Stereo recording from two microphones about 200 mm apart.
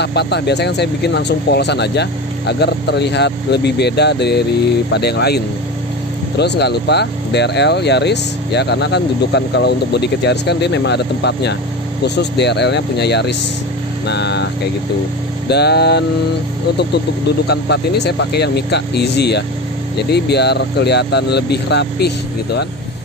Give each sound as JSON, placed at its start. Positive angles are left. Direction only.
{"t": 0.0, "sound": "speech", "side_deg": 55}
{"t": 17.5, "sound": "speech", "side_deg": 55}